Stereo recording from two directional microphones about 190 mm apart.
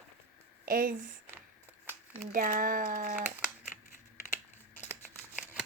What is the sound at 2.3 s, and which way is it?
Speech, 45° right (ahead or behind).